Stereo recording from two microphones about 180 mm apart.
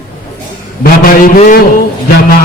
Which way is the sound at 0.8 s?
50° left (ahead or behind).